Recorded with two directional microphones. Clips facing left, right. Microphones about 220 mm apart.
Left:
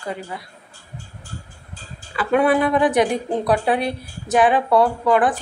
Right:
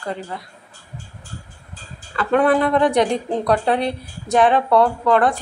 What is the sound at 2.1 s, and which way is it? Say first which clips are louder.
A woman's voice: right 1 dB; 10° left (ahead or behind).